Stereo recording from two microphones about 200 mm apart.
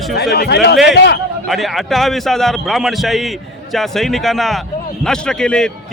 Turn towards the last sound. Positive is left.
turn(degrees=5)  # may be behind; listen again after turning